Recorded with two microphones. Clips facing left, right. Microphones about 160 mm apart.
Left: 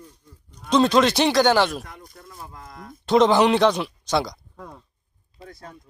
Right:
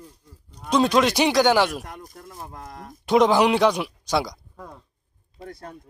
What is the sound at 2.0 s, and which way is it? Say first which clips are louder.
Speech: right 2 dB; 45° right (ahead or behind).